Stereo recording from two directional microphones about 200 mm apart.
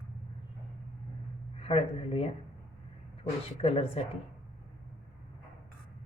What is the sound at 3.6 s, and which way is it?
Speech, 30° left (ahead or behind).